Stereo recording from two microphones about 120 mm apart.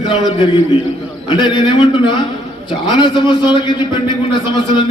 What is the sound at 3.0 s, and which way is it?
Music, 40° left (ahead or behind).